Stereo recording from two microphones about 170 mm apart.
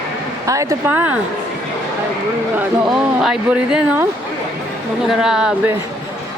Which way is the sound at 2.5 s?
5° right (ahead or behind).